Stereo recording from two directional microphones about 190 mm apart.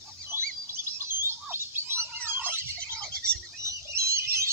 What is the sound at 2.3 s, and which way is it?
Fowl, 10° right (ahead or behind).